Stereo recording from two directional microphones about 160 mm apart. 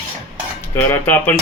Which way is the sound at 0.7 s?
15° left (ahead or behind).